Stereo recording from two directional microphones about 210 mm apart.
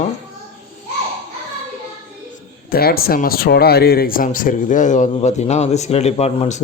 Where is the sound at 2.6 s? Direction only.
45° left (ahead or behind).